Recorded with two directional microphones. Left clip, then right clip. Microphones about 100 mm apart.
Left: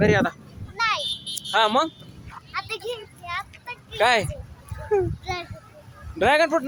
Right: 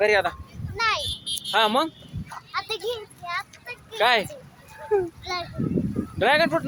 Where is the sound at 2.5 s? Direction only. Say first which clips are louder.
Right 1 dB; 15° right (ahead or behind).